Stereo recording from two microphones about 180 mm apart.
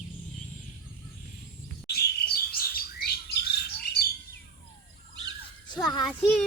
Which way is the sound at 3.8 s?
60° left (ahead or behind).